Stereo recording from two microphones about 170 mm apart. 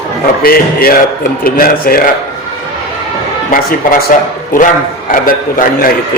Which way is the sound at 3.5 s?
55° left (ahead or behind).